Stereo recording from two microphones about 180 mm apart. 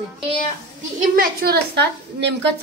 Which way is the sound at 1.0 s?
55° right (ahead or behind).